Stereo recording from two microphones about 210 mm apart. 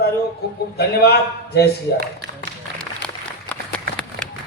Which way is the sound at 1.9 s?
55° right (ahead or behind).